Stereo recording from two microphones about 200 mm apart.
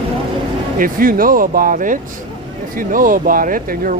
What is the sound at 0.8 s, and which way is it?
Speech, 45° right (ahead or behind).